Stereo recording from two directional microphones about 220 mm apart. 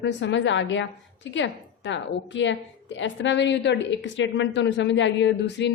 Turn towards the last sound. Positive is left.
turn(degrees=55)  # may be behind; listen again after turning